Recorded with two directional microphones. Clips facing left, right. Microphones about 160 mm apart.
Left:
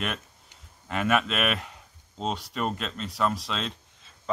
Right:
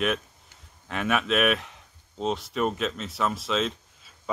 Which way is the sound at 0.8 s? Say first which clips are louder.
Left 1 dB; centre (ahead or behind).